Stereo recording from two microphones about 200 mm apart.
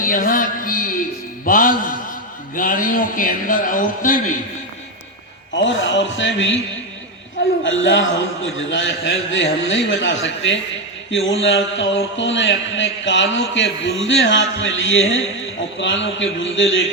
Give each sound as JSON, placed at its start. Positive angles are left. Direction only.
{"t": 0.0, "sound": "music", "side_deg": 45}
{"t": 1.5, "sound": "a man's voice", "side_deg": 45}
{"t": 5.6, "sound": "a man's voice", "side_deg": 70}
{"t": 7.6, "sound": "a man's voice", "side_deg": 70}